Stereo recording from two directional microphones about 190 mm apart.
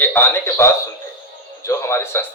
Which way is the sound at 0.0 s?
10° left (ahead or behind).